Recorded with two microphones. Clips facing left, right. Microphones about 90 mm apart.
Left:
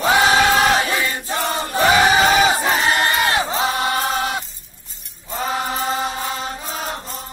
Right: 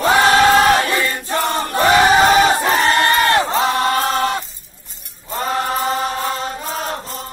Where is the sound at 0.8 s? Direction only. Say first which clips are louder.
Right 2 dB; 5° left (ahead or behind).